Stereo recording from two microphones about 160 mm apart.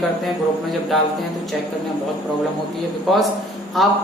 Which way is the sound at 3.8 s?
Centre (ahead or behind).